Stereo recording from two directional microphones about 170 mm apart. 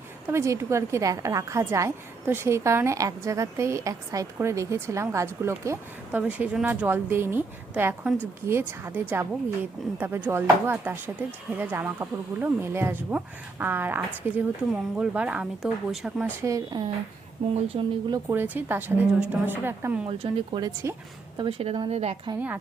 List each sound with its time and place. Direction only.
0.3 s a woman's voice: 15° right (ahead or behind)
16.4 s speech: 20° right (ahead or behind)
17.4 s a woman's voice: 35° right (ahead or behind)
18.1 s a woman's voice: 15° right (ahead or behind)
20.1 s a woman's voice: 30° right (ahead or behind)